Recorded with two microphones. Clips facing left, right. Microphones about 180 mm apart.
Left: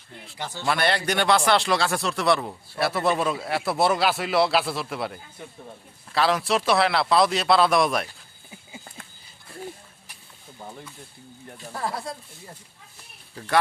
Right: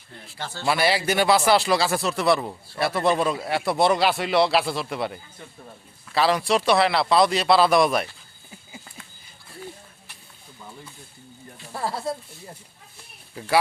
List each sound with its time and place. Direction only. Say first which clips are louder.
0.3 s a man's voice: even; 15° left (ahead or behind)
0.6 s speech: right 2 dB; 5° right (ahead or behind)
11.9 s speech: right 4 dB; 25° right (ahead or behind)
13.4 s speech: right 3 dB; 10° right (ahead or behind)